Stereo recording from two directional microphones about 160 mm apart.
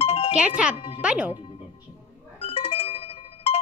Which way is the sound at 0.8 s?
35° left (ahead or behind).